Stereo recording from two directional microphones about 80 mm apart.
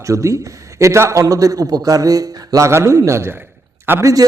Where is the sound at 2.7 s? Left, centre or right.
Right.